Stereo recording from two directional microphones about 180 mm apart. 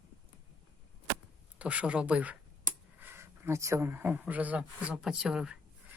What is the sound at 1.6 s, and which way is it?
Speech, 5° right (ahead or behind).